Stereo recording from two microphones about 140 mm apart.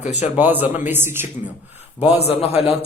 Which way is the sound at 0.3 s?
15° right (ahead or behind).